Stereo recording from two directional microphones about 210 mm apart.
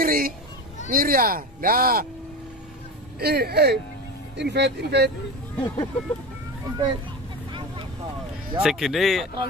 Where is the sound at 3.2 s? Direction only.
50° right (ahead or behind).